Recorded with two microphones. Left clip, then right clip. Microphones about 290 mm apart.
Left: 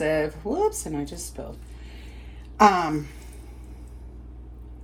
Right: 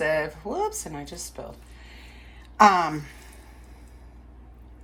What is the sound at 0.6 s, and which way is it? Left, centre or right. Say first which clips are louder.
Speech: left 6 dB; left.